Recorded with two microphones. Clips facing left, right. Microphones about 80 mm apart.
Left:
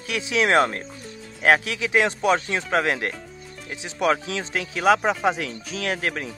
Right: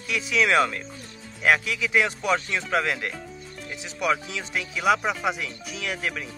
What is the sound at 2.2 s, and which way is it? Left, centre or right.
Speech, left.